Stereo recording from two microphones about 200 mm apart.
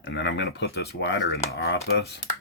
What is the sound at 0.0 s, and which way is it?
Speech, 60° left (ahead or behind).